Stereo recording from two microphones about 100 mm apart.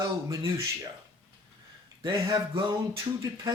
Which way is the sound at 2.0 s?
45° right (ahead or behind).